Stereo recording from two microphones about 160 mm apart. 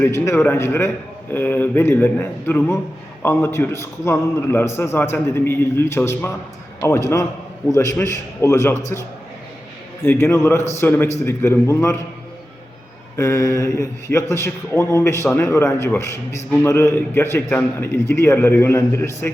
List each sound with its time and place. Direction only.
0.0 s a man's voice: 15° left (ahead or behind)
10.1 s a man's voice: 15° left (ahead or behind)
13.1 s a man's voice: 20° left (ahead or behind)